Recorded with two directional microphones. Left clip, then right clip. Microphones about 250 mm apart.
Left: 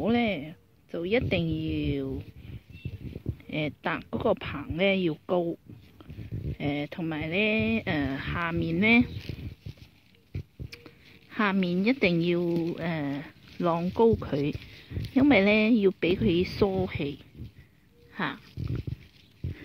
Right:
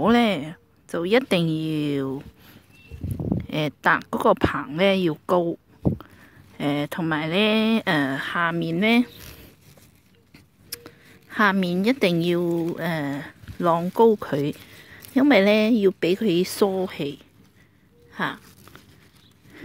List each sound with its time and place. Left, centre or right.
0.0 s speech: right
3.4 s speech: right
8.1 s speech: right
10.7 s speech: right